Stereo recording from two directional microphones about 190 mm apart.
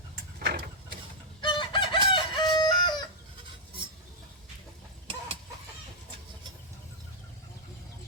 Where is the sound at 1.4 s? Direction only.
25° left (ahead or behind).